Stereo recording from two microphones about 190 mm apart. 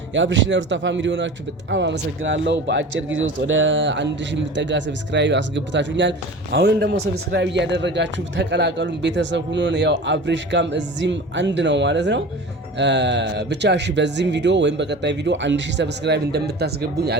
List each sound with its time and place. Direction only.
0.1 s a man's voice: 75° right (ahead or behind)
3.2 s a man's voice: 90° right; by 17.2 s 60° right (ahead or behind)